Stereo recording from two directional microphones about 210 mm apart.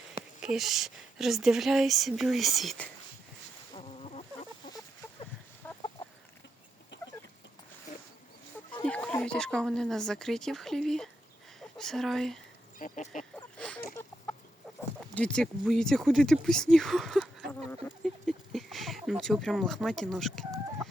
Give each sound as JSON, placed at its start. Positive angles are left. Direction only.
{"t": 0.4, "sound": "speech", "side_deg": 0}
{"t": 3.8, "sound": "fowl", "side_deg": 30}
{"t": 5.6, "sound": "chicken", "side_deg": 10}
{"t": 6.9, "sound": "chicken", "side_deg": 55}
{"t": 8.7, "sound": "speech", "side_deg": 5}
{"t": 12.8, "sound": "speech", "side_deg": 35}
{"t": 13.6, "sound": "a sound", "side_deg": 5}
{"t": 15.1, "sound": "speech", "side_deg": 5}
{"t": 17.8, "sound": "a sound", "side_deg": 0}